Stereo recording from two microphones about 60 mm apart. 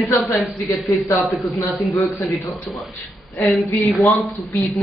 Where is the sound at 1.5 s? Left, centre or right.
Left.